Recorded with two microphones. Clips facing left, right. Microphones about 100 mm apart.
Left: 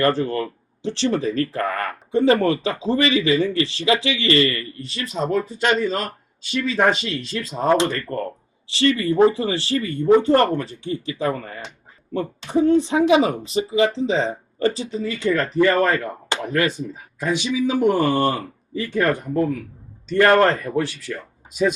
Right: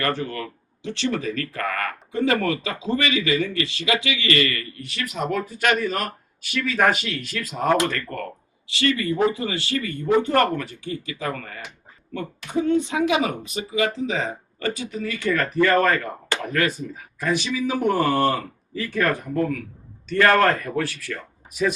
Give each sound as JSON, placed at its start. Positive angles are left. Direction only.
{"t": 0.0, "sound": "speech", "side_deg": 30}